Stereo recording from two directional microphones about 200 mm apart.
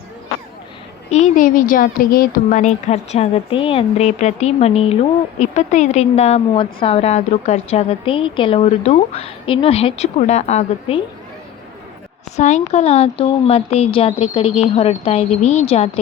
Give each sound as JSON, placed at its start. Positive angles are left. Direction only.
{"t": 1.1, "sound": "a woman's voice", "side_deg": 40}
{"t": 12.4, "sound": "a woman's voice", "side_deg": 35}